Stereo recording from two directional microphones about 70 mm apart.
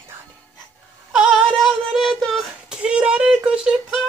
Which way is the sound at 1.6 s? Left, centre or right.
Centre.